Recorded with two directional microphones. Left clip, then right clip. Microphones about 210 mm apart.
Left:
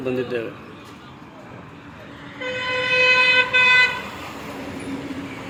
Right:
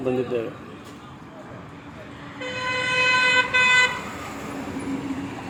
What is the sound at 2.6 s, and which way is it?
Vehicle, 50° right (ahead or behind).